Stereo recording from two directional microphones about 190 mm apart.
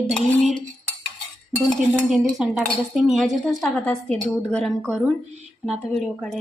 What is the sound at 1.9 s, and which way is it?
A woman's voice, centre (ahead or behind).